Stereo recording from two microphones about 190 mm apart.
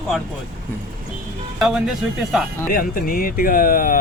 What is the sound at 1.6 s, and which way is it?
Speech, centre (ahead or behind).